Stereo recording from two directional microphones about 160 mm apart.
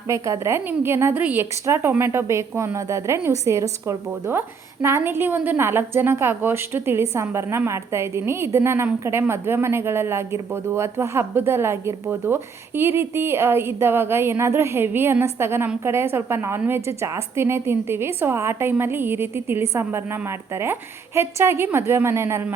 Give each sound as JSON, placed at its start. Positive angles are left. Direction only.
{"t": 0.1, "sound": "a woman's voice", "side_deg": -15}